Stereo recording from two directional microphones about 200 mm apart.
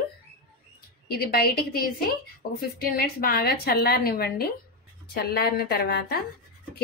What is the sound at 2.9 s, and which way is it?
A woman's voice, 45° left (ahead or behind).